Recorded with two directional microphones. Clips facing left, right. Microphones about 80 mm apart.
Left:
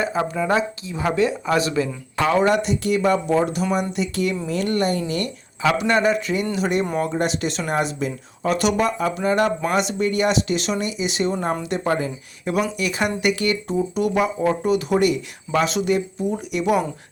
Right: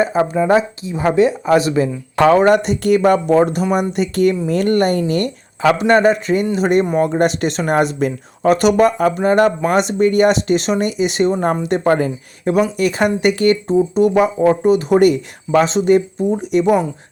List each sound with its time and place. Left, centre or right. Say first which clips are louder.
0.0 s speech: right 7 dB; right
2.1 s speech: right 7 dB; right
15.6 s speech: right 6 dB; right